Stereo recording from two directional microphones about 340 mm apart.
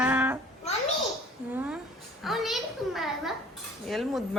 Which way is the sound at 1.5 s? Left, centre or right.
Centre.